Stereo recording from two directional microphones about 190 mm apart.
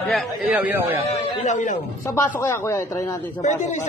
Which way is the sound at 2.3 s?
15° left (ahead or behind).